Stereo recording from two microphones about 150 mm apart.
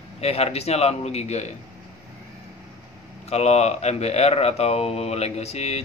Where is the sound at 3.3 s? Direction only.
45° left (ahead or behind).